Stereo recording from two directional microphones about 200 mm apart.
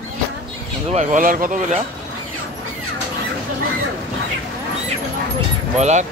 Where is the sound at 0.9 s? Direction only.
40° right (ahead or behind).